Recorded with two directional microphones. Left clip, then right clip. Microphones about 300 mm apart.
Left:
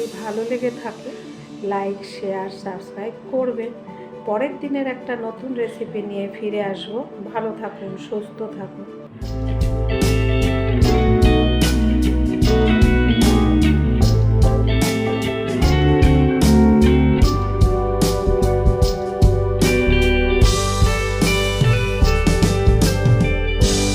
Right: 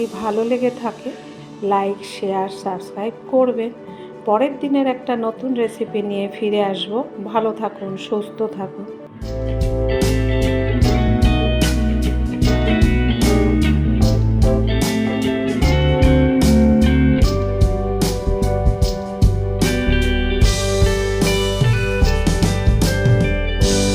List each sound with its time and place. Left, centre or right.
2.3 s a woman's voice: right
9.4 s music: centre